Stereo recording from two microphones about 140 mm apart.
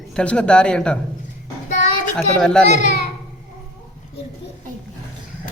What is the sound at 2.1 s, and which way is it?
Speech, 5° left (ahead or behind).